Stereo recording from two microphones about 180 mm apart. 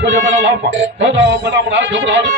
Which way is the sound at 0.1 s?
90° right.